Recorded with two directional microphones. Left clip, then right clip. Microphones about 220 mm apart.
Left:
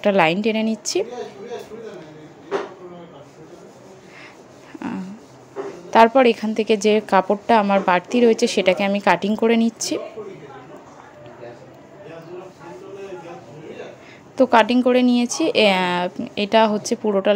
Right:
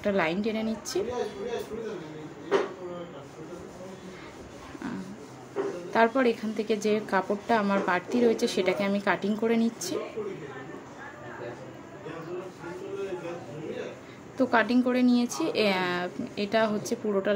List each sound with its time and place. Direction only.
0.0 s a woman's voice: 35° left (ahead or behind)
5.9 s a woman's voice: 35° left (ahead or behind)
14.3 s a woman's voice: 35° left (ahead or behind)